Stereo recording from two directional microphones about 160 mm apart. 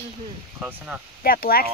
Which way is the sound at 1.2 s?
70° left (ahead or behind).